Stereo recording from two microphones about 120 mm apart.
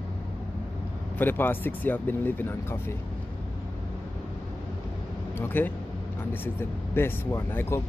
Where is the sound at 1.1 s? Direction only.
15° left (ahead or behind).